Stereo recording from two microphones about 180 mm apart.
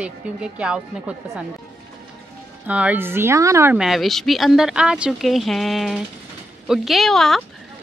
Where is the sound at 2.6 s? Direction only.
10° right (ahead or behind).